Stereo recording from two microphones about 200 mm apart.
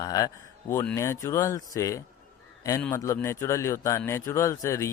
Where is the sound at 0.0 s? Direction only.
20° left (ahead or behind).